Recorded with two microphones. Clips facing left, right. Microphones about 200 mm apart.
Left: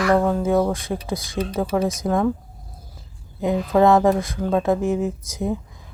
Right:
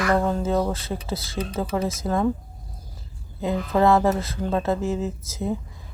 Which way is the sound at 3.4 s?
15° left (ahead or behind).